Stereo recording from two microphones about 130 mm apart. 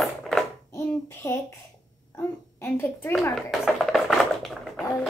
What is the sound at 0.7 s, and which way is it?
Speech, 15° left (ahead or behind).